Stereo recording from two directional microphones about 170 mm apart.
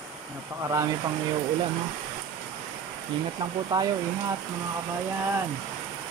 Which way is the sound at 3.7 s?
20° right (ahead or behind).